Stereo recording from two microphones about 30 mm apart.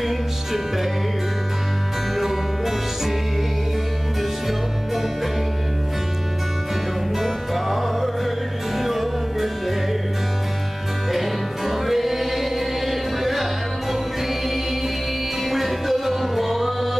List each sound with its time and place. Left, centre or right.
0.0 s music: centre
2.1 s music: centre
4.2 s music: centre
7.2 s music: centre
11.1 s music: centre
15.4 s music: centre